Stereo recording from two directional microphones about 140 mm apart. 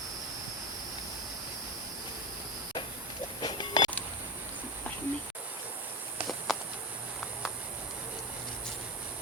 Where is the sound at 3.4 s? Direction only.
35° left (ahead or behind).